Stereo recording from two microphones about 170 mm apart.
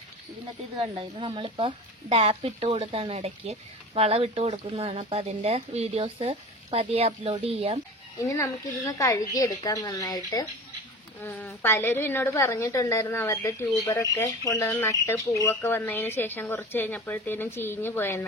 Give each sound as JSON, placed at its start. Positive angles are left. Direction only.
{"t": 0.9, "sound": "speech", "side_deg": -30}
{"t": 8.2, "sound": "a woman's voice", "side_deg": 20}
{"t": 11.2, "sound": "a woman's voice", "side_deg": 10}